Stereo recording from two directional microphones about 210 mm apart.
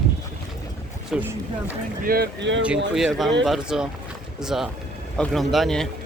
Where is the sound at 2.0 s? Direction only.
45° right (ahead or behind).